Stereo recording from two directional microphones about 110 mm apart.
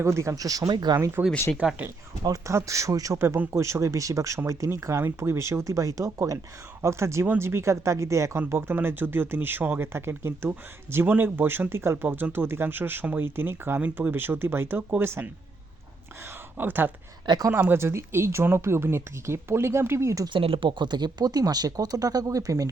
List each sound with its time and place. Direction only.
0.0 s speech: 25° right (ahead or behind)
0.9 s speech: 20° right (ahead or behind)
2.2 s speech: 30° right (ahead or behind)
16.6 s speech: 20° right (ahead or behind)
17.2 s speech: 40° right (ahead or behind)
17.5 s speech: 20° right (ahead or behind)
20.4 s speech: 55° right (ahead or behind); by 22.7 s 30° right (ahead or behind)